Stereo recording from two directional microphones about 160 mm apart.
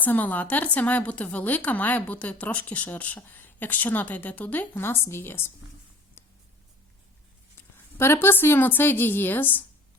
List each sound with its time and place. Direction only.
0.0 s speech: 10° left (ahead or behind)
6.2 s writing: 15° left (ahead or behind)
7.9 s speech: 15° left (ahead or behind)